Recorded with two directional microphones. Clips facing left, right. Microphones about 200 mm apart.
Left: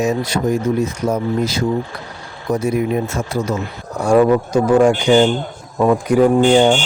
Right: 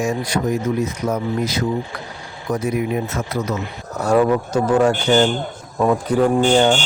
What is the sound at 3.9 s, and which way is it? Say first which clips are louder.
A man's voice: left 3 dB; 10° left (ahead or behind).